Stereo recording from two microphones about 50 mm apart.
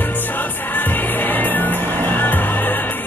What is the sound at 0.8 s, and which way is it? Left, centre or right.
Music, left.